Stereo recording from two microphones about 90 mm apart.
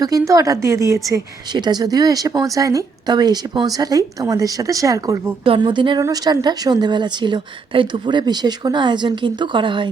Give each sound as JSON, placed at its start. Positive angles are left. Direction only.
{"t": 0.0, "sound": "a woman's voice", "side_deg": -40}
{"t": 1.5, "sound": "speech", "side_deg": -50}
{"t": 5.5, "sound": "speech", "side_deg": -65}
{"t": 6.0, "sound": "speech", "side_deg": -40}